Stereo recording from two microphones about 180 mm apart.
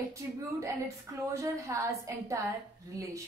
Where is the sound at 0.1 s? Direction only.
15° right (ahead or behind).